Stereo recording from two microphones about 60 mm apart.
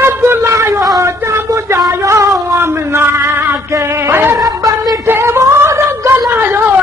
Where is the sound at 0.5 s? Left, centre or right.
Right.